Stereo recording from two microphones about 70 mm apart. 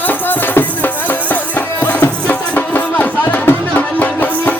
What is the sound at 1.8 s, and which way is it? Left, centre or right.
Music, left.